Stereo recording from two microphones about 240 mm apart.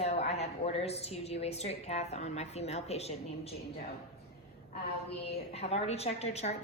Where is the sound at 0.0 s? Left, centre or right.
Left.